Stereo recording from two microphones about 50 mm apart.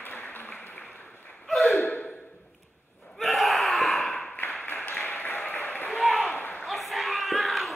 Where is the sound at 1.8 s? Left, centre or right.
Left.